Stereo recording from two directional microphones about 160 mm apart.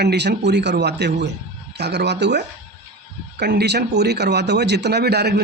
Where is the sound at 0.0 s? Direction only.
90° right.